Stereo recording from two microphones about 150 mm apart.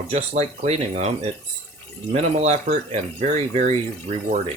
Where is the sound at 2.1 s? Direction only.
45° right (ahead or behind).